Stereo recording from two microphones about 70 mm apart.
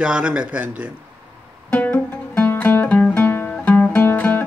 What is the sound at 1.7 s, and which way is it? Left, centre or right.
Music, left.